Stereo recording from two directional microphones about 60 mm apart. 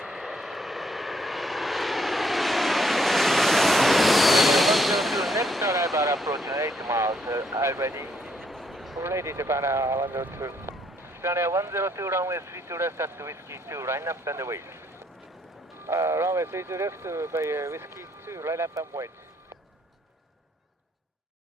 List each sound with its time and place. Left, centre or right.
0.0 s vehicle: centre
5.6 s a sound: right
6.5 s vehicle: right
8.1 s a sound: centre
9.0 s speech: right
15.9 s speech: right
18.7 s speech: right